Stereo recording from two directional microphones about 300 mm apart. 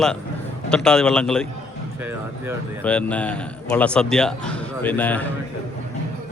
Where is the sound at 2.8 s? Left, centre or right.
Centre.